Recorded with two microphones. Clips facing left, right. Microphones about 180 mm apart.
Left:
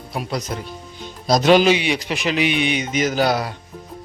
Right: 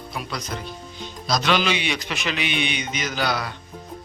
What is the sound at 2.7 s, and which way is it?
Speech, 45° left (ahead or behind).